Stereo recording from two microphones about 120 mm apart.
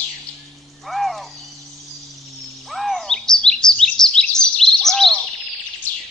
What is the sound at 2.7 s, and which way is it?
Bird vocalization, centre (ahead or behind).